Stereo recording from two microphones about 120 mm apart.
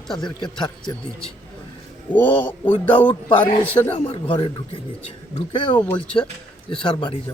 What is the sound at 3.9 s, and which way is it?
Speech, 45° left (ahead or behind).